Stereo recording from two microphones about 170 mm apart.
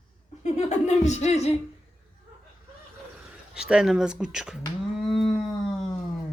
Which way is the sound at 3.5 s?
5° right (ahead or behind).